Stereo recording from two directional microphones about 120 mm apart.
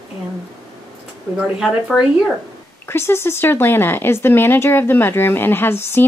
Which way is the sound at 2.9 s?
20° left (ahead or behind).